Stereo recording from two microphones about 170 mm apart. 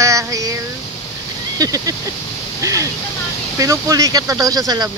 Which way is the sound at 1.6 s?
20° right (ahead or behind).